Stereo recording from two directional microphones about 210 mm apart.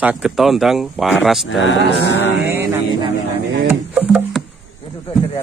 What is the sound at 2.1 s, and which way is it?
Speech, 55° left (ahead or behind).